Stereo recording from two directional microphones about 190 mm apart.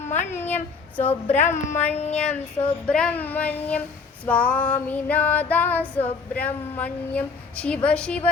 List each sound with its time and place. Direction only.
0.3 s female singing: 10° left (ahead or behind)
1.3 s speech: 35° left (ahead or behind)
2.8 s female singing: 5° left (ahead or behind)
7.9 s a woman's voice: 5° left (ahead or behind)